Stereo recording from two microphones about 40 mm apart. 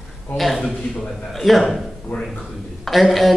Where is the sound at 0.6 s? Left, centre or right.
Left.